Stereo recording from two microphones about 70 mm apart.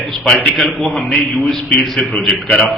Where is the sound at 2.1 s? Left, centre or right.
Centre.